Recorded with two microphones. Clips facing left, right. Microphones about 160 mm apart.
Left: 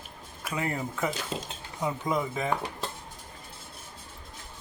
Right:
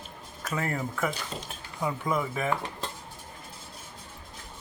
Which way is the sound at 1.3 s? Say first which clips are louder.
Left 4 dB; 90° left.